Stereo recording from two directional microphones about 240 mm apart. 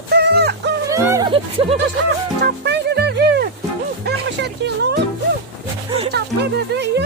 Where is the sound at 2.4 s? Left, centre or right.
Right.